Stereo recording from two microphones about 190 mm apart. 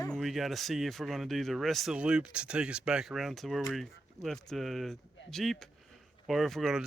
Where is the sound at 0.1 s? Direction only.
Centre (ahead or behind).